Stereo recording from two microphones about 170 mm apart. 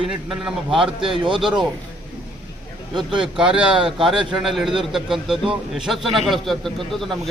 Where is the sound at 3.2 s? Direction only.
5° right (ahead or behind).